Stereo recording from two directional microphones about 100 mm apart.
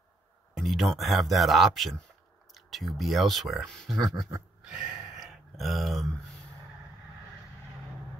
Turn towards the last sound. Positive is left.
turn(degrees=0)  # may be behind; listen again after turning